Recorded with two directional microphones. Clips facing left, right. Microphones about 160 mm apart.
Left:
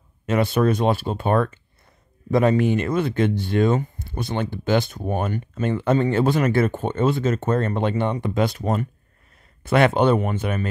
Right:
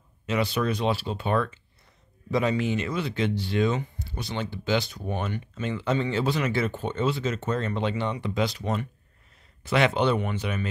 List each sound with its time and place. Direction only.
0.3 s speech: 50° left (ahead or behind)